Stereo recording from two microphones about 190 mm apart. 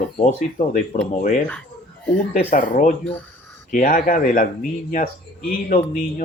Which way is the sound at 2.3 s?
45° left (ahead or behind).